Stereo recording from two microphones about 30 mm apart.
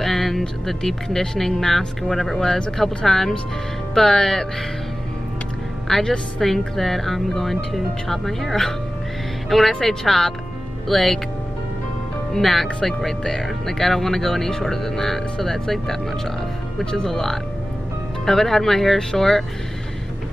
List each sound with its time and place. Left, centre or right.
0.0 s speech: centre
5.9 s a woman's voice: centre
12.3 s speech: centre